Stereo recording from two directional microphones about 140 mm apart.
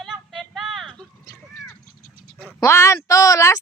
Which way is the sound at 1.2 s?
15° left (ahead or behind).